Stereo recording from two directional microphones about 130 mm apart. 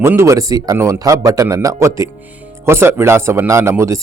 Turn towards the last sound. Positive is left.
turn(degrees=-20)  # may be behind; listen again after turning